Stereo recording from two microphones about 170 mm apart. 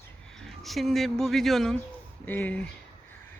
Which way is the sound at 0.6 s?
Centre (ahead or behind).